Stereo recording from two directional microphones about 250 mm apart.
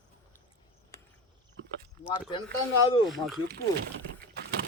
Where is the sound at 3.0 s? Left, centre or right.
Centre.